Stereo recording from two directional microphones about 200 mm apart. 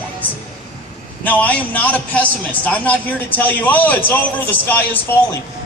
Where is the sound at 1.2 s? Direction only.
10° left (ahead or behind).